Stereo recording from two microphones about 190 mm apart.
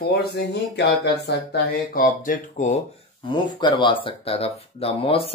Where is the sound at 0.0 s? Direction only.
60° left (ahead or behind).